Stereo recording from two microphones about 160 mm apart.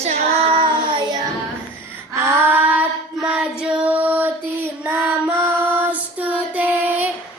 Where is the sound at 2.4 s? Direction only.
10° right (ahead or behind).